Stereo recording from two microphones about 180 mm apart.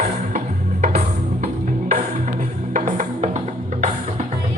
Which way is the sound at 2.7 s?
45° right (ahead or behind).